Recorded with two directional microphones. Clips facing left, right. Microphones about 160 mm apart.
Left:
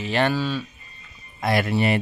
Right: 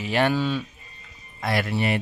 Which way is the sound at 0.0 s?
10° right (ahead or behind).